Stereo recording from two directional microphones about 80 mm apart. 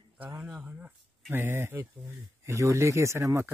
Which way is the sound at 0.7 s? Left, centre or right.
Centre.